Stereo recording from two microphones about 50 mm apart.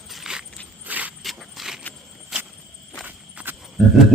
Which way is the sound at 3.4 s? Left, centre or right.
Right.